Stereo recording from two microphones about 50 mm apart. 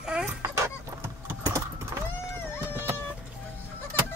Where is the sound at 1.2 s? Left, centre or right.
Right.